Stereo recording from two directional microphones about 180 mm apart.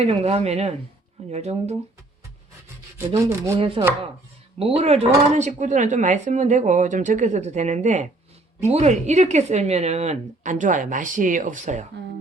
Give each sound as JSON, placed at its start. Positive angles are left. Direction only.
{"t": 0.0, "sound": "speech", "side_deg": -35}
{"t": 3.1, "sound": "rub", "side_deg": -15}
{"t": 3.6, "sound": "speech", "side_deg": -30}